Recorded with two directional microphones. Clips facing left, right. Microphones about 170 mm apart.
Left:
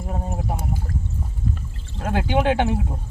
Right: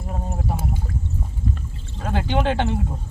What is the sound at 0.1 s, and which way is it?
Speech, 15° left (ahead or behind).